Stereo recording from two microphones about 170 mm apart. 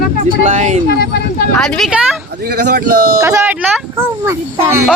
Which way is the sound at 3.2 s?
15° right (ahead or behind).